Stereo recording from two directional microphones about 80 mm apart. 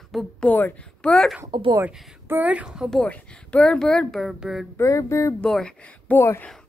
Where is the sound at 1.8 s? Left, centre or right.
Right.